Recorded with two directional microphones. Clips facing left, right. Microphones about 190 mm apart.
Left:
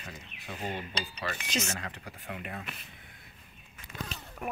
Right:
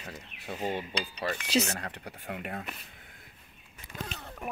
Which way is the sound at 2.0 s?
45° right (ahead or behind).